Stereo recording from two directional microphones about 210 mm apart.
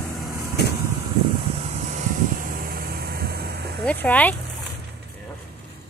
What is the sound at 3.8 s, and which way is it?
Speech, 5° left (ahead or behind).